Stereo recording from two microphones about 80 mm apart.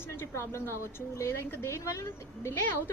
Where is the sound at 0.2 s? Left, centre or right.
Left.